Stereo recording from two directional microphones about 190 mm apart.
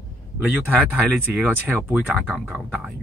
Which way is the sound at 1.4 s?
10° right (ahead or behind).